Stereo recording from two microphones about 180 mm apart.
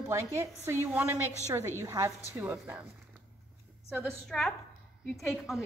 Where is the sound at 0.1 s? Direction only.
15° right (ahead or behind).